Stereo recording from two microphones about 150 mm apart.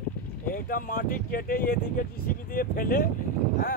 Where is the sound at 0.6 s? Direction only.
70° left (ahead or behind).